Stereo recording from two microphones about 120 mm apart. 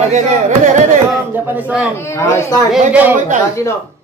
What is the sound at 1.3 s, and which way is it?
Speech, 15° right (ahead or behind).